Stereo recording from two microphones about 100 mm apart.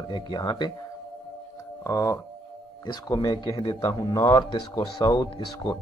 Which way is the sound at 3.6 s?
60° left (ahead or behind).